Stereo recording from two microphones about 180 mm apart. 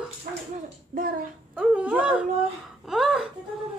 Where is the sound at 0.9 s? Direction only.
50° right (ahead or behind).